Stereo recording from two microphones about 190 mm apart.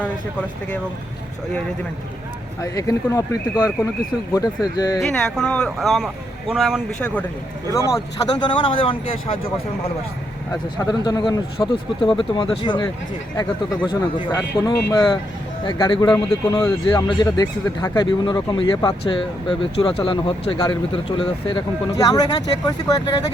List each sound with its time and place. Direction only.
2.6 s speech: 15° left (ahead or behind)
4.4 s speech: 20° left (ahead or behind)
4.9 s speech: 5° left (ahead or behind); by 9.4 s 30° left (ahead or behind)
10.8 s speech: 20° left (ahead or behind)
14.3 s speech: 15° left (ahead or behind)